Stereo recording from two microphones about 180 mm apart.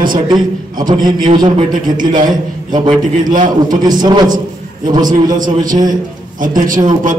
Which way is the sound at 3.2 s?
45° right (ahead or behind).